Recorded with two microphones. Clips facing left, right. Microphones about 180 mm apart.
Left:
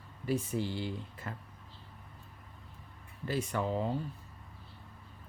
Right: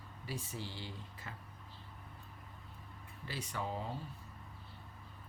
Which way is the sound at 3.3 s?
55° left (ahead or behind).